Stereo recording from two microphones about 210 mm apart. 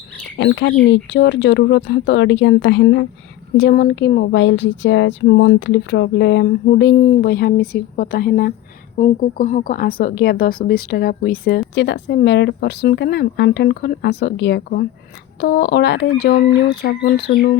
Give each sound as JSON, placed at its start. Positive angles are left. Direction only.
{"t": 0.3, "sound": "speech", "side_deg": 60}
{"t": 9.0, "sound": "speech", "side_deg": 35}